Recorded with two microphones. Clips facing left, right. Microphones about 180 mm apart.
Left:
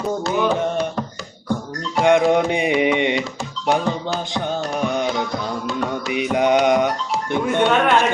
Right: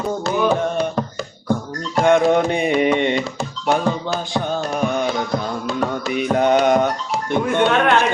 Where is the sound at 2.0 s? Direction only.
15° left (ahead or behind).